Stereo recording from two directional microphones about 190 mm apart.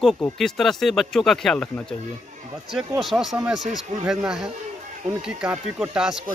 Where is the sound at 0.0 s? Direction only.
Centre (ahead or behind).